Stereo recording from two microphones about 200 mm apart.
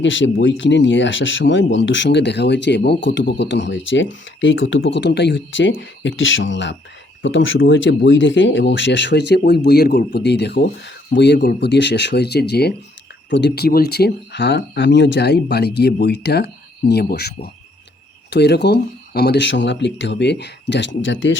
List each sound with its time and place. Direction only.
0.0 s speech: 70° left (ahead or behind)